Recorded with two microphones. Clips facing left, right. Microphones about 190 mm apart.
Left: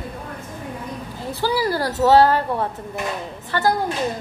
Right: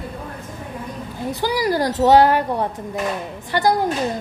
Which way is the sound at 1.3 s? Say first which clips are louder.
Right 1 dB; 15° right (ahead or behind).